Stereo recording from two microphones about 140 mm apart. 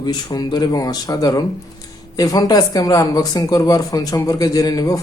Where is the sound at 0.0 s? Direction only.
30° left (ahead or behind).